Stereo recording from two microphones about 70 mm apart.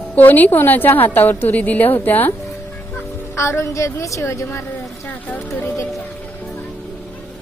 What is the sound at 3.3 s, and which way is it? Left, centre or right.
A woman's voice, left.